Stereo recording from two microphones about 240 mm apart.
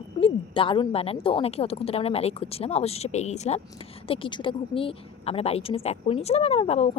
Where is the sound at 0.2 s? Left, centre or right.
Left.